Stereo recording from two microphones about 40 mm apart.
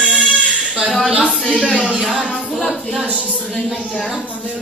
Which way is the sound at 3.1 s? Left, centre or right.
Right.